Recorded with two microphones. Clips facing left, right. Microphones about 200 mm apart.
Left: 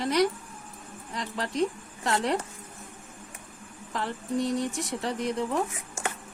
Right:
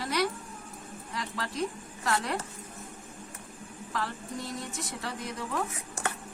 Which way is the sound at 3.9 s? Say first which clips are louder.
Left 2 dB; 25° left (ahead or behind).